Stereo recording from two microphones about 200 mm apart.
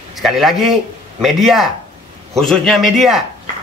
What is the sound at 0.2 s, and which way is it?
A man's voice, centre (ahead or behind).